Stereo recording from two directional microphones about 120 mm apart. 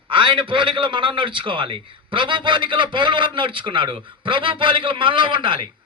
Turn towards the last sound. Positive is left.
turn(degrees=-45)  # may be behind; listen again after turning